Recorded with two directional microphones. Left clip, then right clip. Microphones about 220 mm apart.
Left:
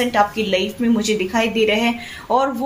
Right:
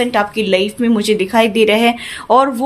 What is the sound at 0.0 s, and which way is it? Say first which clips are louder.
A woman's voice: right 2 dB; 50° right (ahead or behind).